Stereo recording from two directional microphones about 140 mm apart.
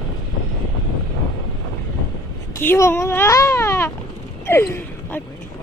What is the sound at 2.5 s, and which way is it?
Speech, 20° left (ahead or behind).